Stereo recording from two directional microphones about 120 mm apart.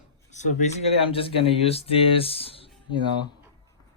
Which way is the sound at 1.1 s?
50° left (ahead or behind).